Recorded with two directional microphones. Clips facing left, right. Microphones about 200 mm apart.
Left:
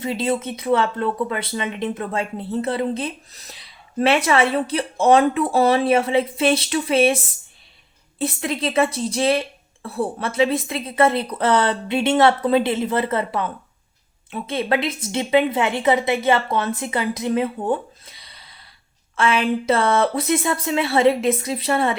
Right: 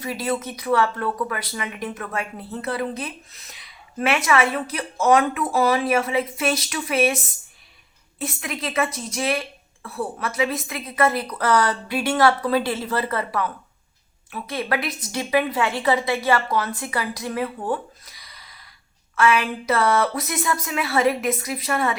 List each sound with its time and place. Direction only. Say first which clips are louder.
0.0 s speech: left 3 dB; 25° left (ahead or behind)
8.2 s speech: left 6 dB; 30° left (ahead or behind)